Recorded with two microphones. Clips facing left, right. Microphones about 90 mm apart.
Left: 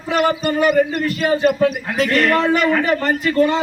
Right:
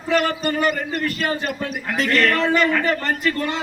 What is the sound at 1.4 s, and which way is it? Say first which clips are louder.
Speech: left 11 dB; 55° left (ahead or behind).